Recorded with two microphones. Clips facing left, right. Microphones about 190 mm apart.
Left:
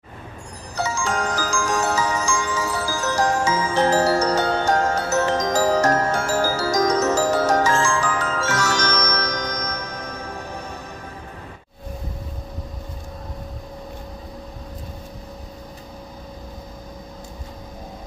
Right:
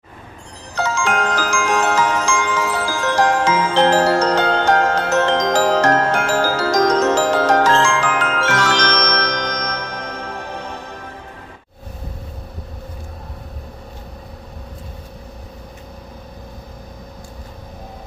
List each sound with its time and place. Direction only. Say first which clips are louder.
0.7 s glockenspiel: right 4 dB; 90° right
5.9 s glockenspiel: right 4 dB; 60° right (ahead or behind)